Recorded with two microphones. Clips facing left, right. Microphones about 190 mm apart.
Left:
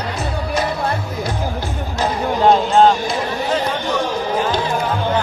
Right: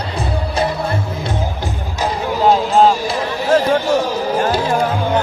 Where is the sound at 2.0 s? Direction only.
5° right (ahead or behind).